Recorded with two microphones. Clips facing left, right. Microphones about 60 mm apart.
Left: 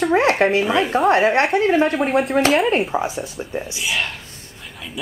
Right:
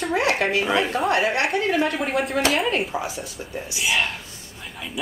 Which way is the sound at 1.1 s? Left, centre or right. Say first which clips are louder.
Left 6 dB; left.